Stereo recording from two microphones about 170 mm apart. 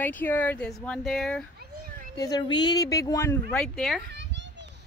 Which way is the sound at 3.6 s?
5° left (ahead or behind).